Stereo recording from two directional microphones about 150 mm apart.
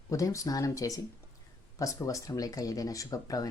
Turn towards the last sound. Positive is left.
turn(degrees=25)  # may be behind; listen again after turning